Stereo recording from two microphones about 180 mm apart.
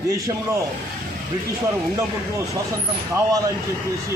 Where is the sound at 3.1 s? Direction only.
20° right (ahead or behind).